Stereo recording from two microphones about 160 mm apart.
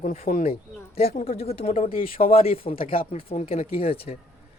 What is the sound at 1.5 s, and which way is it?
Speech, 40° left (ahead or behind).